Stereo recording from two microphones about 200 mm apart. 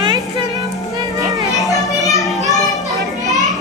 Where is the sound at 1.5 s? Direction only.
Centre (ahead or behind).